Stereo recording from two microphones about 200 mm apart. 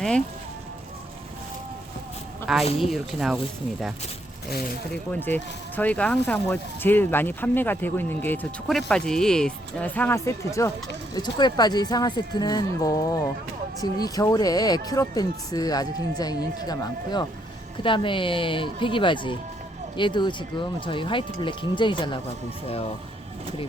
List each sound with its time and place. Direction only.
2.7 s speech: centre (ahead or behind); by 22.2 s 25° left (ahead or behind)